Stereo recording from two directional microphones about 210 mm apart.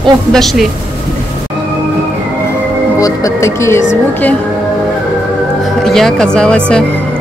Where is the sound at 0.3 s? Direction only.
Centre (ahead or behind).